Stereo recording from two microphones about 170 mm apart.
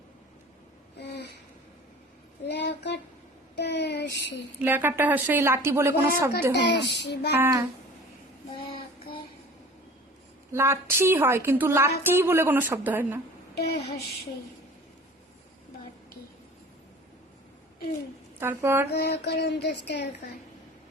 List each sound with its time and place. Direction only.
0.9 s a sound: 75° left (ahead or behind)
2.5 s speech: 80° left
3.5 s child singing: 80° left
4.6 s a woman's voice: 10° right (ahead or behind)
6.5 s a woman's voice: 90° left
7.3 s a woman's voice: 15° right (ahead or behind)
8.7 s child singing: 30° left (ahead or behind)
10.5 s a woman's voice: 15° right (ahead or behind)
18.3 s a woman's voice: 15° right (ahead or behind)
18.9 s speech: 80° left